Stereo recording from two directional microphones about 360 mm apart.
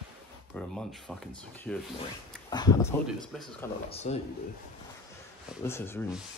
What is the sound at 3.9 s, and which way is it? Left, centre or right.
Speech, centre.